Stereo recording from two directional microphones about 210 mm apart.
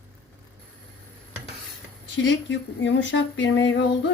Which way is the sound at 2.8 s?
60° left (ahead or behind).